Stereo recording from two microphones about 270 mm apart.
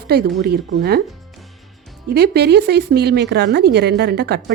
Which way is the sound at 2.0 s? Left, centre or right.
Right.